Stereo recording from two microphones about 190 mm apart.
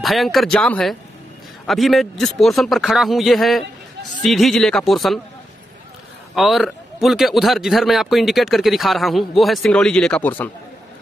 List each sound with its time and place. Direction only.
0.0 s a man's voice: centre (ahead or behind)
6.3 s a man's voice: centre (ahead or behind)